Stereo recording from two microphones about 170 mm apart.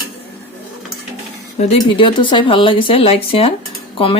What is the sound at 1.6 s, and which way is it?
Speech, 35° left (ahead or behind).